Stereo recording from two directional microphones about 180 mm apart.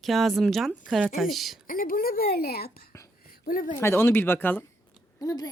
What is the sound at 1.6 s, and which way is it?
Speech, 50° left (ahead or behind).